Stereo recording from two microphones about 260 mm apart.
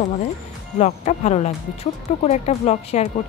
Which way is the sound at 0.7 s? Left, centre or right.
Left.